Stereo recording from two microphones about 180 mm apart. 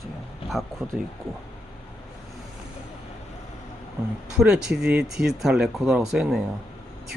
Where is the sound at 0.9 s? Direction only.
Centre (ahead or behind).